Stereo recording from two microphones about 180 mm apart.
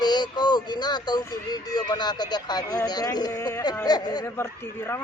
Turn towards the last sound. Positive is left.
turn(degrees=15)  # may be behind; listen again after turning